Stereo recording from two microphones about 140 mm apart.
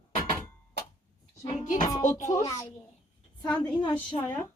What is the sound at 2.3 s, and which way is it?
Speech, 25° left (ahead or behind).